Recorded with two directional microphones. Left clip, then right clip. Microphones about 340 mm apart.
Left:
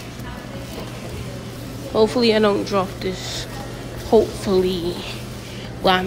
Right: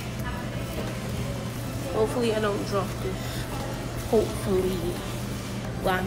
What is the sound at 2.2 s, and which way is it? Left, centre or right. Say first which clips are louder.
Speech: left 9 dB; centre.